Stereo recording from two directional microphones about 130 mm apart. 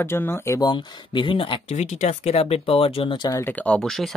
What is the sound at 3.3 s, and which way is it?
Speech, 15° left (ahead or behind).